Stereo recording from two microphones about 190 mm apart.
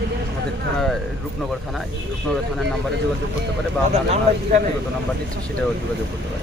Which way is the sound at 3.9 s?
40° right (ahead or behind).